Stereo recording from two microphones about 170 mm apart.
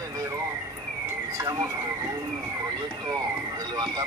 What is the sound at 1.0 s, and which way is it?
Police car, 20° right (ahead or behind).